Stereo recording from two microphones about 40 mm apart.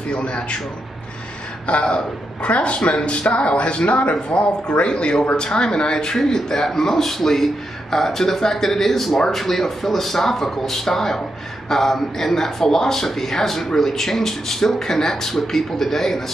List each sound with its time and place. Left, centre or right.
0.1 s speech: left
1.7 s speech: left; by 16.3 s centre